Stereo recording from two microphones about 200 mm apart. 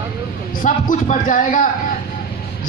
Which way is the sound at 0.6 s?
40° left (ahead or behind).